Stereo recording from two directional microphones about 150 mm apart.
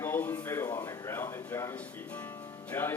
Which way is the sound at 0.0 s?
15° left (ahead or behind).